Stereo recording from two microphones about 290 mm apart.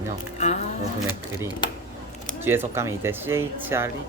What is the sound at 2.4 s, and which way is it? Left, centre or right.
Speech, centre.